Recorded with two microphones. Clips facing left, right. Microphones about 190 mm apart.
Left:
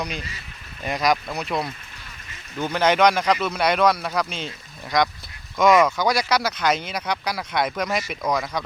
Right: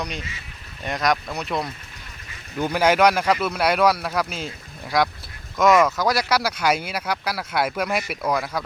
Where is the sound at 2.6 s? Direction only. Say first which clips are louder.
Right 1 dB; 10° right (ahead or behind).